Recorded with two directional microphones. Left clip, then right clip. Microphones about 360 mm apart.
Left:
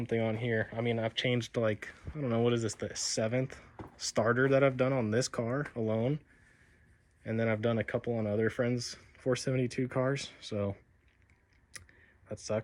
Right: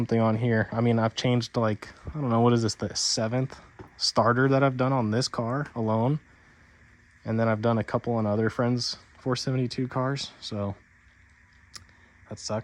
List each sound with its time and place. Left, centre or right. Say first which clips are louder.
0.1 s speech: right 6 dB; right
1.0 s speech: right 5 dB; centre
7.3 s speech: right 6 dB; centre
8.1 s speech: right 6 dB; right
8.7 s speech: right 7 dB; centre
11.7 s a sound: right 4 dB; centre
12.3 s speech: right 3 dB; centre